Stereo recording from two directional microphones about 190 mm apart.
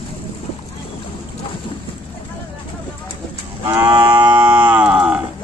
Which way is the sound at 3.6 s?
10° right (ahead or behind).